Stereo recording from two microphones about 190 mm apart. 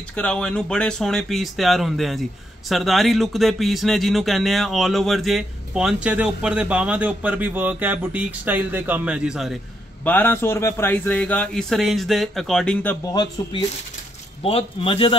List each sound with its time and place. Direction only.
0.1 s speech: 5° left (ahead or behind)
10.0 s a man's voice: 10° left (ahead or behind)
13.0 s a man's voice: 20° left (ahead or behind)